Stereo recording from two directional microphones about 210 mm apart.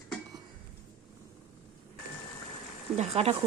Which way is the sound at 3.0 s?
30° right (ahead or behind).